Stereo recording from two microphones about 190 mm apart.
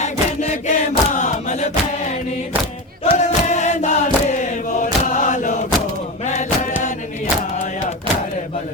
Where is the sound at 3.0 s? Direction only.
40° left (ahead or behind).